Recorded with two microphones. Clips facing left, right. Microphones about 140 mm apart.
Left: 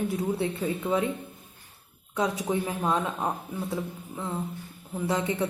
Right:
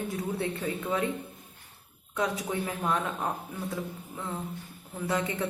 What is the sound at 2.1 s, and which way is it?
A woman's voice, 20° left (ahead or behind).